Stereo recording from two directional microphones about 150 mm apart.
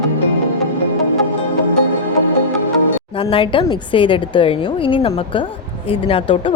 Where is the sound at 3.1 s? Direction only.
35° left (ahead or behind).